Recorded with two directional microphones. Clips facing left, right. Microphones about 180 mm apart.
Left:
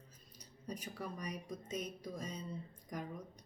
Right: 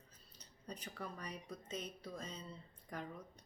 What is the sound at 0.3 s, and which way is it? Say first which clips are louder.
Speech: left 5 dB; 10° left (ahead or behind).